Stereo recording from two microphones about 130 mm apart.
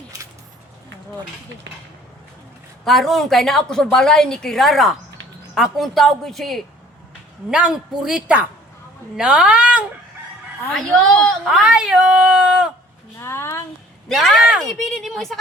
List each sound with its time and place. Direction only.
2.8 s a woman's voice: centre (ahead or behind)
10.8 s a woman's voice: 5° left (ahead or behind)
11.6 s speech: 5° right (ahead or behind)
13.1 s a sound: 20° left (ahead or behind)
14.1 s a woman's voice: centre (ahead or behind)